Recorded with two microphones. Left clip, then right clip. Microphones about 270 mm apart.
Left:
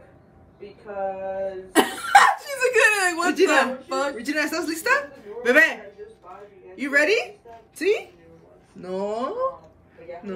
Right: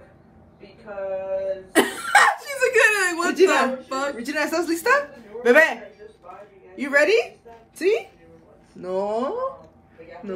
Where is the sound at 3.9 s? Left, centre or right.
Centre.